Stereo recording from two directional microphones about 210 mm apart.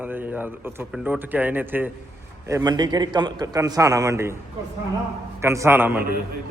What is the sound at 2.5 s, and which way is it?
Speech, 20° right (ahead or behind).